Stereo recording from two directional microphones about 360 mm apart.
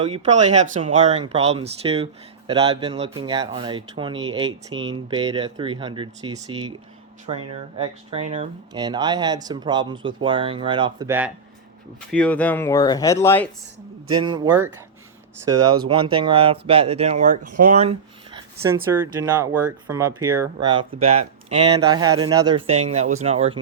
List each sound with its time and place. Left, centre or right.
0.1 s speech: centre
12.1 s speech: centre
14.1 s speech: centre
18.3 s speech: centre